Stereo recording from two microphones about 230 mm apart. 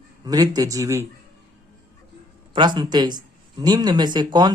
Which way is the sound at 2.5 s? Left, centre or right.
Centre.